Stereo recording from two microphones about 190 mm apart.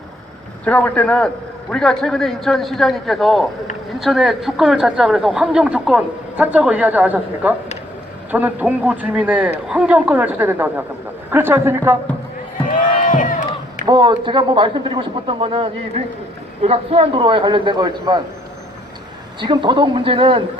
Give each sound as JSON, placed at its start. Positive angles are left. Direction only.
{"t": 0.6, "sound": "a man's voice", "side_deg": 5}
{"t": 12.7, "sound": "a sound", "side_deg": 45}
{"t": 13.8, "sound": "speech", "side_deg": -20}
{"t": 19.4, "sound": "speech", "side_deg": -25}